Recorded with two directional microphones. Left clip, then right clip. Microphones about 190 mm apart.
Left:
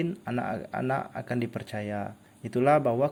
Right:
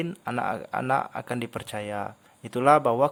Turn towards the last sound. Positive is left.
turn(degrees=-25)  # may be behind; listen again after turning